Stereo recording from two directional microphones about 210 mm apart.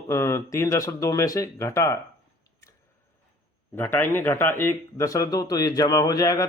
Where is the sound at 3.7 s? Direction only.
10° left (ahead or behind).